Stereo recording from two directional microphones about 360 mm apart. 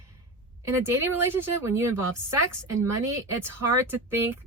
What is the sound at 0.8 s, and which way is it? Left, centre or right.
Speech, centre.